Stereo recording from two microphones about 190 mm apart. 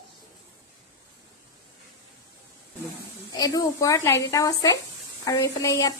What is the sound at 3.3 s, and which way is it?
A woman's voice, 20° left (ahead or behind).